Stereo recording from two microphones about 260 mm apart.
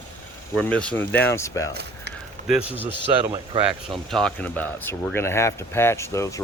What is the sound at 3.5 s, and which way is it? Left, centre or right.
Speech, centre.